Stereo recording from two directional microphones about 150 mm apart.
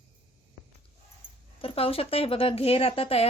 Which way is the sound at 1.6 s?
40° left (ahead or behind).